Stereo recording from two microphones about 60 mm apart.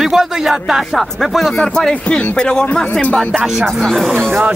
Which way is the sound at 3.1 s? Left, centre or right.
Centre.